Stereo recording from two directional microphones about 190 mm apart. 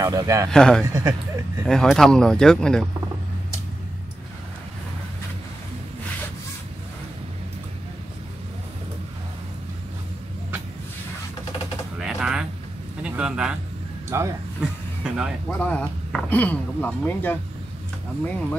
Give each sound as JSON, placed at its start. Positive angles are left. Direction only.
{"t": 0.0, "sound": "speech", "side_deg": -15}
{"t": 0.5, "sound": "speech", "side_deg": 5}
{"t": 0.9, "sound": "speech", "side_deg": -15}
{"t": 1.7, "sound": "speech", "side_deg": 0}
{"t": 12.0, "sound": "a sound", "side_deg": -5}
{"t": 14.1, "sound": "speech", "side_deg": -15}
{"t": 14.6, "sound": "vehicle", "side_deg": -5}
{"t": 15.4, "sound": "speech", "side_deg": 5}